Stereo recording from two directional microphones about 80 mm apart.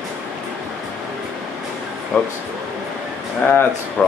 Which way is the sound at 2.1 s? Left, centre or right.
Centre.